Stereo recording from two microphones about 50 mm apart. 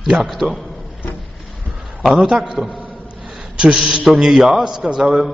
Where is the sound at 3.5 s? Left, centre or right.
Centre.